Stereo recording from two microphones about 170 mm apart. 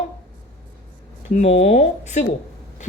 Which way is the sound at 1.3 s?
40° left (ahead or behind).